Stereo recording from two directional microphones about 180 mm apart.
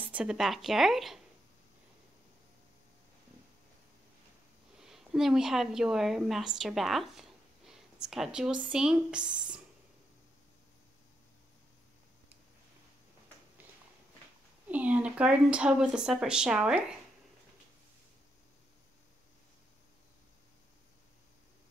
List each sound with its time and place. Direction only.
0.0 s speech: 5° right (ahead or behind)
4.7 s a woman's voice: 5° right (ahead or behind)
14.7 s speech: 10° right (ahead or behind)